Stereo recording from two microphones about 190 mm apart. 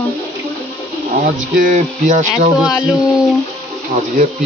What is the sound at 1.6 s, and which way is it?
Speech, 40° right (ahead or behind).